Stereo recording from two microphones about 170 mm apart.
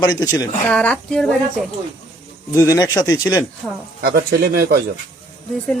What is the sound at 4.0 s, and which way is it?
Speech, 65° right (ahead or behind).